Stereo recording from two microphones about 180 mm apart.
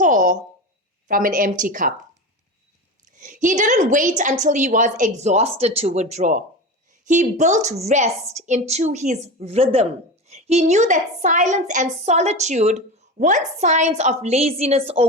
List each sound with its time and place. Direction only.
0.0 s a sound: 45° right (ahead or behind)
1.0 s a woman's voice: 50° right (ahead or behind)
3.2 s a woman's voice: 45° right (ahead or behind)